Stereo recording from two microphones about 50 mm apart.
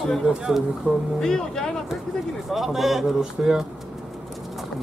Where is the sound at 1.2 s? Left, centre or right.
Centre.